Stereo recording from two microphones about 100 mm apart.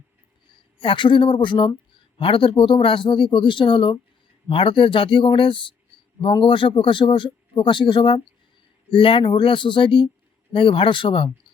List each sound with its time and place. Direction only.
0.8 s speech: 55° left (ahead or behind)